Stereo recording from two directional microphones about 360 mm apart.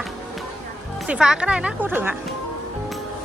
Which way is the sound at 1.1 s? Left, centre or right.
Centre.